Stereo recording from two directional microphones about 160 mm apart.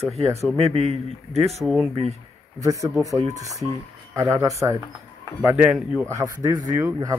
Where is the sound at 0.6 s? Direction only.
40° right (ahead or behind).